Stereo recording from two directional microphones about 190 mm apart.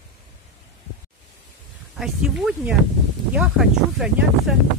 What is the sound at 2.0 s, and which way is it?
Speech, centre (ahead or behind).